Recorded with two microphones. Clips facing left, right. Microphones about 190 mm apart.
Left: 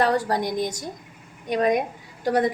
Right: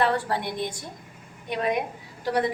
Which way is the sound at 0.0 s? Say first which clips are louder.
Left 3 dB; 40° left (ahead or behind).